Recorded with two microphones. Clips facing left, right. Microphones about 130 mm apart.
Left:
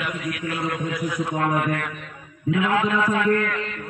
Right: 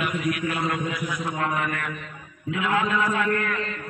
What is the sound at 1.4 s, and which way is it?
Speech, 55° left (ahead or behind).